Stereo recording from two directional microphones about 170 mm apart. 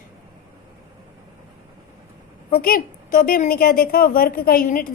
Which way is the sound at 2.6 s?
55° left (ahead or behind).